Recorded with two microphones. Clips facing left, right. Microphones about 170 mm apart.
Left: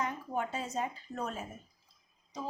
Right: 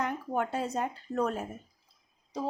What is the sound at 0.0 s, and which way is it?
Speech, 60° right (ahead or behind).